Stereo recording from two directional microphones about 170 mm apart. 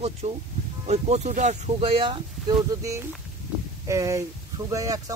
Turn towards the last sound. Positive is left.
turn(degrees=-20)  # may be behind; listen again after turning